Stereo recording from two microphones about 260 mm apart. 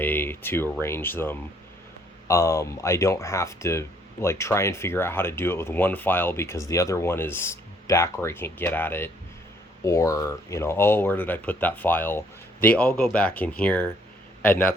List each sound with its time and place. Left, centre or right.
0.0 s speech: centre